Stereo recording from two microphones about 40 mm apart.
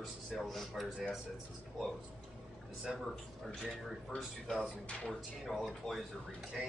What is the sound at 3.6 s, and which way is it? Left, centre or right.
Speech, centre.